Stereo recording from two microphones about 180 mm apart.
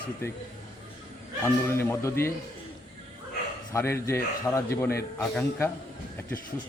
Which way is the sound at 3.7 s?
15° left (ahead or behind).